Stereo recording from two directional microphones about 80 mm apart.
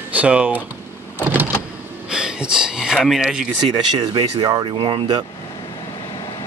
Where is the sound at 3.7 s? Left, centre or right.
Right.